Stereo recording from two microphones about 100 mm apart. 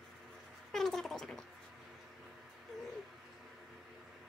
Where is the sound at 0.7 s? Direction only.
5° left (ahead or behind).